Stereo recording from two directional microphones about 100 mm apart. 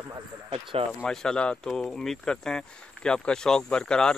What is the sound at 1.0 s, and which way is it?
Speech, 5° left (ahead or behind).